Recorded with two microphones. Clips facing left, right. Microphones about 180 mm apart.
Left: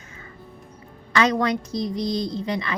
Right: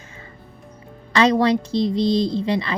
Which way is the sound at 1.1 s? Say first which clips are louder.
Right 4 dB; 30° right (ahead or behind).